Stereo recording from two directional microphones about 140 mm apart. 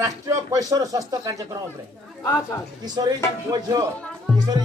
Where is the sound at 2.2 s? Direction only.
25° left (ahead or behind).